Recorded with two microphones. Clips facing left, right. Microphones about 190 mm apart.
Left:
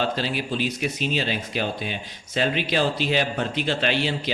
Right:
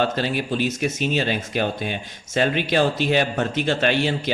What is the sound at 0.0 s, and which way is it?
Speech, 50° right (ahead or behind).